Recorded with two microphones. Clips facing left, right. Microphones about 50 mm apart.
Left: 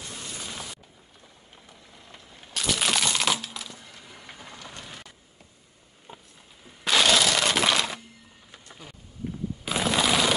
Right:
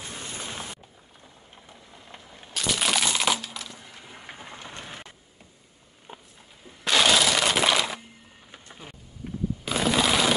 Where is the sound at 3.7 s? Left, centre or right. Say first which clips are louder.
Right 1 dB; centre; by 5.1 s right.